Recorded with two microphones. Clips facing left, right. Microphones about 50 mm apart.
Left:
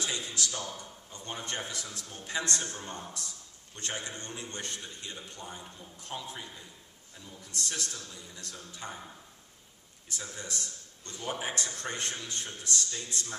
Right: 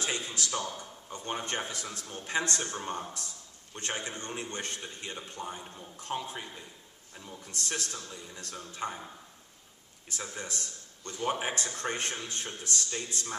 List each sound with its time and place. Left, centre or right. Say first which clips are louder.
0.0 s a sound: right 1 dB; right
0.7 s a man's voice: right 3 dB; right
5.8 s speech: right 7 dB; right
10.0 s a man's voice: right 2 dB; right